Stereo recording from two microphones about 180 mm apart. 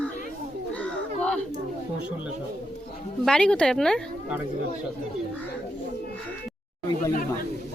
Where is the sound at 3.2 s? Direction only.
5° left (ahead or behind).